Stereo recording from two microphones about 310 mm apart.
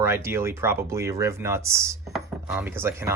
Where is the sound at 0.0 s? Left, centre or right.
Centre.